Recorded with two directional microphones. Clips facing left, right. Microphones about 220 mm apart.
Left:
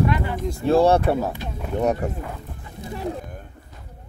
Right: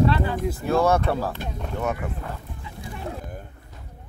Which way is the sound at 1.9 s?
40° left (ahead or behind).